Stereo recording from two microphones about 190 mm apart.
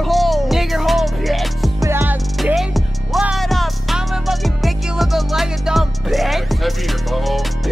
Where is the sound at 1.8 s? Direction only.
15° right (ahead or behind).